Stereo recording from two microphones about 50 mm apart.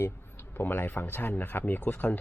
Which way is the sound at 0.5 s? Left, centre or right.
Left.